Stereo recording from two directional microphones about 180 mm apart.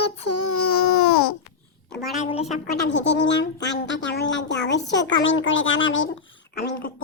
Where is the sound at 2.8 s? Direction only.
80° left.